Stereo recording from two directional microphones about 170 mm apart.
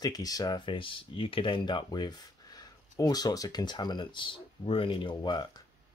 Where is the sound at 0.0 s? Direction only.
20° left (ahead or behind).